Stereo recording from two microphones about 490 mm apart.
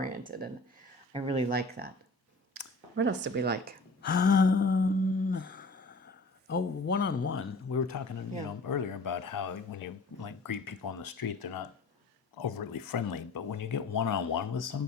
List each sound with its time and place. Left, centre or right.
0.0 s speech: centre
4.0 s a sound: centre
6.5 s speech: left
12.4 s speech: left